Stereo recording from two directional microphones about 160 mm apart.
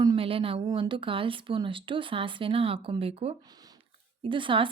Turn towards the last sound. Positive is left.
turn(degrees=-30)  # may be behind; listen again after turning